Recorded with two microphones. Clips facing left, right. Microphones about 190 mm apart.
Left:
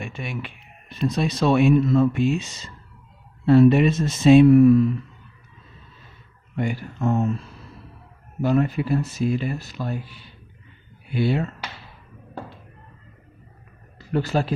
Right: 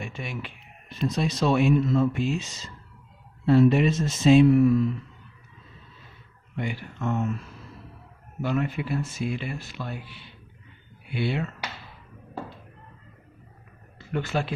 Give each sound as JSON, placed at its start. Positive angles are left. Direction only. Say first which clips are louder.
{"t": 0.0, "sound": "speech", "louder": "left 3 dB", "side_deg": 60}
{"t": 3.4, "sound": "speech", "louder": "left 4 dB", "side_deg": 60}
{"t": 6.6, "sound": "speech", "louder": "left 6 dB", "side_deg": 45}
{"t": 14.0, "sound": "speech", "louder": "left 5 dB", "side_deg": 35}